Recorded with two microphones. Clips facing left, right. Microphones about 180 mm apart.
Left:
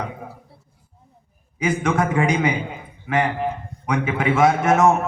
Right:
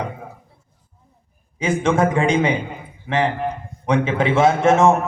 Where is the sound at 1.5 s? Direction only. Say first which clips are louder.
Right 2 dB; 25° right (ahead or behind).